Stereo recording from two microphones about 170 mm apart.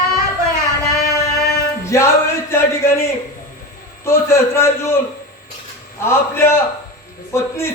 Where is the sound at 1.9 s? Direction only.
15° left (ahead or behind).